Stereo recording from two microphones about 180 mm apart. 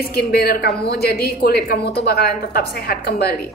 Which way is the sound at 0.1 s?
60° left (ahead or behind).